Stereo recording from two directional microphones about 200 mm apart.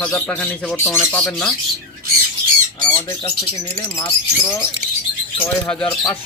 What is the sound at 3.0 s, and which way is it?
Speech, 20° left (ahead or behind).